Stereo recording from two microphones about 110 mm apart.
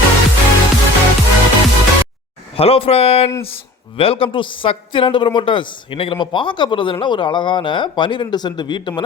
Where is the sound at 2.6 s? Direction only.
60° left (ahead or behind).